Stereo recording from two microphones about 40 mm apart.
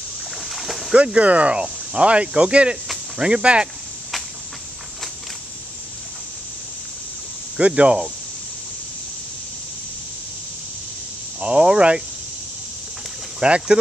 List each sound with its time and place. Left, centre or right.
0.4 s boat: centre
0.9 s speech: right
1.6 s cricket: right
7.6 s speech: right
11.3 s cricket: right
13.4 s cricket: right